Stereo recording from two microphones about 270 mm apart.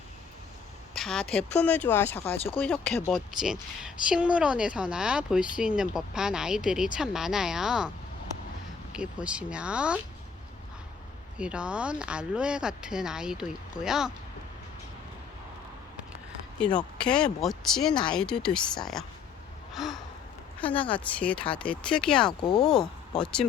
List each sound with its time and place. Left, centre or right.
0.9 s speech: centre
2.1 s speech: left
2.6 s speech: centre
8.9 s speech: centre
11.3 s speech: centre
16.6 s speech: centre
19.7 s gasp: centre
20.6 s speech: centre